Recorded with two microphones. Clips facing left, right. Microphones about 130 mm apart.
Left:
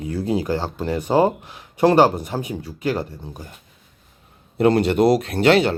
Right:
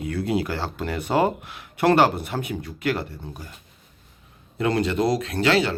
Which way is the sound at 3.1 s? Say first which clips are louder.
Left 2 dB; 15° left (ahead or behind).